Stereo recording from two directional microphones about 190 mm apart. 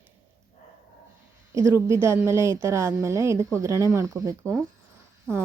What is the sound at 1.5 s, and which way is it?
A woman's voice, 15° right (ahead or behind).